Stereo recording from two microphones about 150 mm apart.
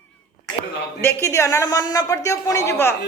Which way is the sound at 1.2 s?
20° left (ahead or behind).